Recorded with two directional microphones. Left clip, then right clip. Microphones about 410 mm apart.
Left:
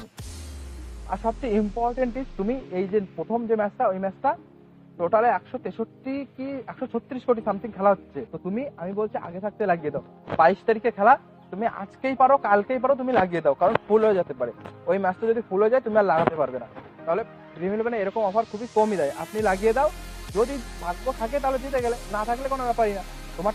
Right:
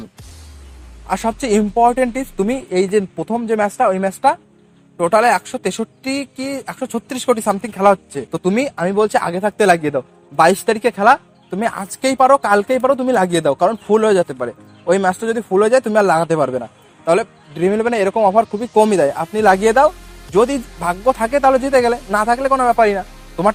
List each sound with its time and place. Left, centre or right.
1.1 s speech: right